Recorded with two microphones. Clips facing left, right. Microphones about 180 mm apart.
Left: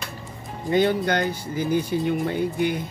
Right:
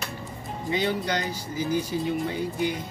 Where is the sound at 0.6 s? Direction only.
55° left (ahead or behind).